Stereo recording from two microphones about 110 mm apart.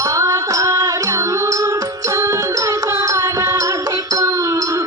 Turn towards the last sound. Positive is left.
turn(degrees=-30)  # may be behind; listen again after turning